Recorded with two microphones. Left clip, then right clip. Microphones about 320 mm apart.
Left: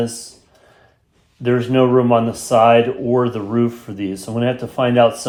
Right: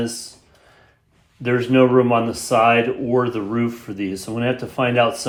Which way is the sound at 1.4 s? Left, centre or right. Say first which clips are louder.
Left 1 dB; centre.